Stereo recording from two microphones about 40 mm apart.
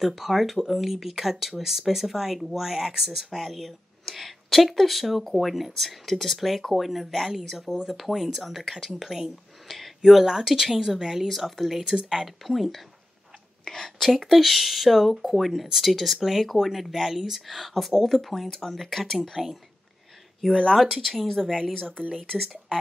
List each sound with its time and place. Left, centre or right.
0.0 s speech: centre
7.3 s speech: centre
10.2 s speech: centre
13.7 s speech: centre
14.1 s speech: centre
19.4 s speech: centre
20.7 s speech: centre